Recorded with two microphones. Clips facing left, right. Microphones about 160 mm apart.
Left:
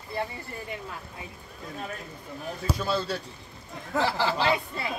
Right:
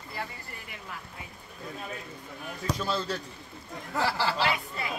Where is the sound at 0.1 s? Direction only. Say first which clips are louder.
Left 7 dB; 25° left (ahead or behind).